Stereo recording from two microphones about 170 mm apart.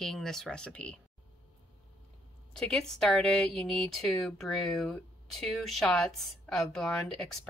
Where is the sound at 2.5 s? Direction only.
5° left (ahead or behind).